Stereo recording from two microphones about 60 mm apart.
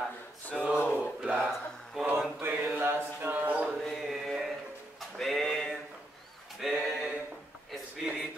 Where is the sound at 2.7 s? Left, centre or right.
Right.